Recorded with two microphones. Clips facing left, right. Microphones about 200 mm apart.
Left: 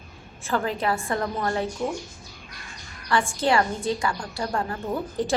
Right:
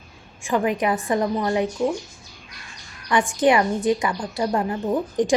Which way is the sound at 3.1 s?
15° right (ahead or behind).